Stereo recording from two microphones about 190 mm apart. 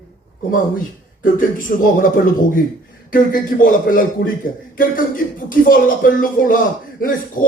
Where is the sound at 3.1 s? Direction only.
45° left (ahead or behind).